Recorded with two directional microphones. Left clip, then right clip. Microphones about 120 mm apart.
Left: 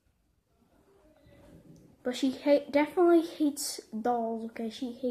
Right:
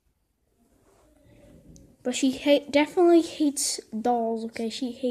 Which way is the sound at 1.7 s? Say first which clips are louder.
Right 4 dB; 25° right (ahead or behind).